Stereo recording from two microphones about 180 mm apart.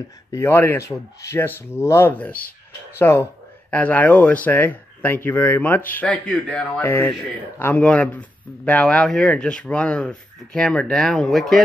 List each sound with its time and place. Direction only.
0.3 s speech: 15° left (ahead or behind)